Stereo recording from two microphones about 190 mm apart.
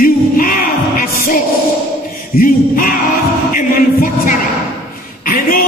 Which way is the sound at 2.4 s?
50° left (ahead or behind).